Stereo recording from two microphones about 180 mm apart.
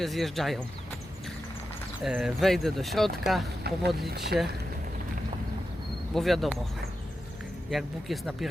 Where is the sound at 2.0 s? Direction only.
5° right (ahead or behind).